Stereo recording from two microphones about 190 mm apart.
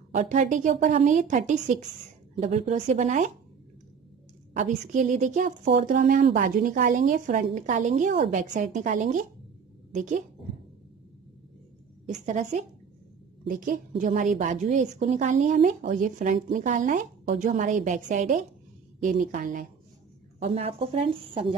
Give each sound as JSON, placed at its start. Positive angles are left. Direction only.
{"t": 0.1, "sound": "a woman's voice", "side_deg": -40}
{"t": 4.6, "sound": "a woman's voice", "side_deg": -40}
{"t": 12.1, "sound": "a woman's voice", "side_deg": -40}
{"t": 20.4, "sound": "a woman's voice", "side_deg": -35}